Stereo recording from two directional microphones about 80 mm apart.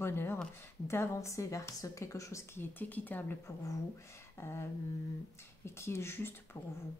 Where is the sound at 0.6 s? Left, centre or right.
Left.